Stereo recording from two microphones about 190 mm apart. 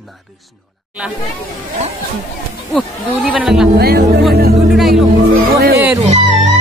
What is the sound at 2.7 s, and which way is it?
Speech, centre (ahead or behind).